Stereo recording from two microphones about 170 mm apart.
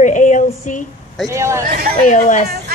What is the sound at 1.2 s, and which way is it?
Speech, 15° right (ahead or behind).